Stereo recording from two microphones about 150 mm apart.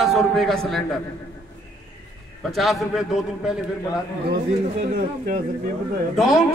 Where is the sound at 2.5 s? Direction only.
Centre (ahead or behind).